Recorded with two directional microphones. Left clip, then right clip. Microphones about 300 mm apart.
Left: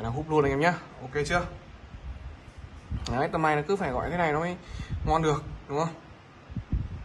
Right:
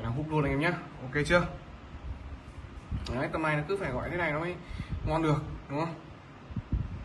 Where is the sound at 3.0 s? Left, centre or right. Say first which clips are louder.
Left 5 dB; centre.